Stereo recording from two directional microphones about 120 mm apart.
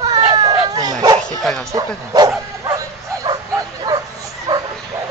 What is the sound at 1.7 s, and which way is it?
Speech, 35° right (ahead or behind).